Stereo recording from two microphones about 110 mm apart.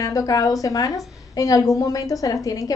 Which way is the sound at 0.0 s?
30° left (ahead or behind).